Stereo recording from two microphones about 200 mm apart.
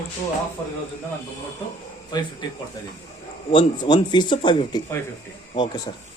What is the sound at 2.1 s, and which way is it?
Speech, 20° left (ahead or behind).